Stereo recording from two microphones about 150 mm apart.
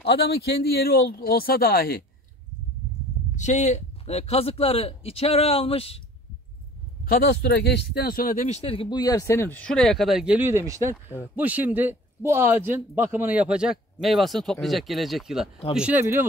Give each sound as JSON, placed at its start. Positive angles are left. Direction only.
{"t": 0.0, "sound": "speech", "side_deg": 90}
{"t": 3.3, "sound": "a man's voice", "side_deg": 50}
{"t": 7.1, "sound": "a man's voice", "side_deg": 85}